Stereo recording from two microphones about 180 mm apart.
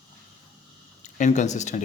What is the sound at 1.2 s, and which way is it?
Speech, 40° left (ahead or behind).